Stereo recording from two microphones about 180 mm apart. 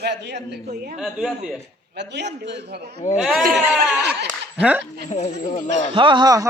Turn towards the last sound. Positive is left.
turn(degrees=-20)  # may be behind; listen again after turning